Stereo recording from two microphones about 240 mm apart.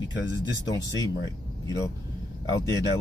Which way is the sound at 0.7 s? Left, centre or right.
Centre.